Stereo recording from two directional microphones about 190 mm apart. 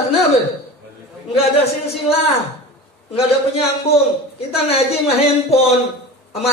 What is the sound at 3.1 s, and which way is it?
A man's voice, 30° left (ahead or behind).